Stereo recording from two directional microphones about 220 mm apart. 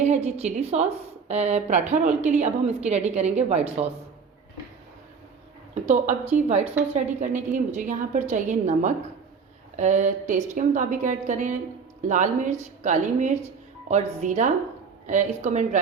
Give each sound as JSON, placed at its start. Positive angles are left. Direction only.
{"t": 0.0, "sound": "a woman's voice", "side_deg": -30}
{"t": 5.8, "sound": "a woman's voice", "side_deg": -30}